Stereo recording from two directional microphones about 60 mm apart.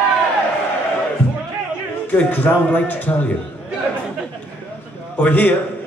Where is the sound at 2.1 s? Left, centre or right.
Left.